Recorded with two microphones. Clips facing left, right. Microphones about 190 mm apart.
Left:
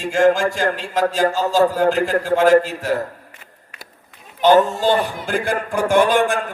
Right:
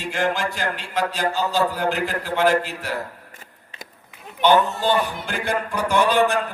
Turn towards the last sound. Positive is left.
turn(degrees=50)  # may be behind; listen again after turning